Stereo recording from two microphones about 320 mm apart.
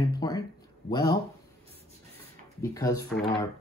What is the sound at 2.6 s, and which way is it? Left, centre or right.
Speech, centre.